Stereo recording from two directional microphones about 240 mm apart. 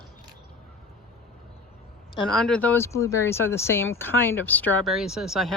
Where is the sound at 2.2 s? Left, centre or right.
Centre.